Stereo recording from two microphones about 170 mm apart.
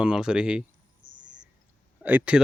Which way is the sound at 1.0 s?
90° right.